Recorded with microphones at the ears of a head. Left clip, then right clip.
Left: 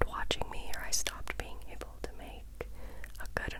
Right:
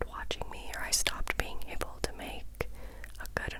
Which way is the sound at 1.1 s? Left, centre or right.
Right.